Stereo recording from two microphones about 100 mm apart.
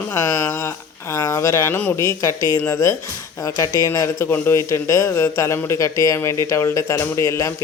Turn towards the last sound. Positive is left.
turn(degrees=30)  # may be behind; listen again after turning